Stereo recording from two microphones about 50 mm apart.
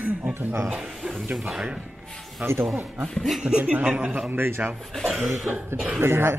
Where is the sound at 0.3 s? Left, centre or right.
Right.